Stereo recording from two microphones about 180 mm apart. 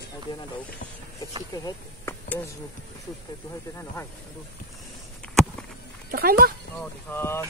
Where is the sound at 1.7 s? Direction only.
15° left (ahead or behind).